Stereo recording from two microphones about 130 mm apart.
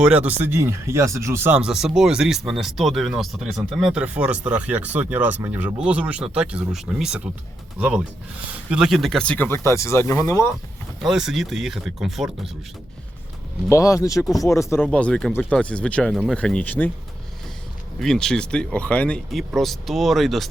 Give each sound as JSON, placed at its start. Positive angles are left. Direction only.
{"t": 0.0, "sound": "speech", "side_deg": -10}
{"t": 1.6, "sound": "speech", "side_deg": -5}
{"t": 11.0, "sound": "speech", "side_deg": -5}
{"t": 13.7, "sound": "speech", "side_deg": 25}
{"t": 14.8, "sound": "speech", "side_deg": 5}
{"t": 18.0, "sound": "speech", "side_deg": 5}